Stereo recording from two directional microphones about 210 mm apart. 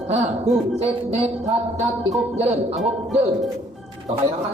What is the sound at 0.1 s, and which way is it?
Music, 30° right (ahead or behind).